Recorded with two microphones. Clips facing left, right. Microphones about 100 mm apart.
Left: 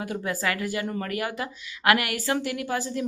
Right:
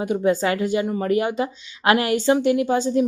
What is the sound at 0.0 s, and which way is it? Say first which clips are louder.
Speech: right 9 dB; 20° right (ahead or behind).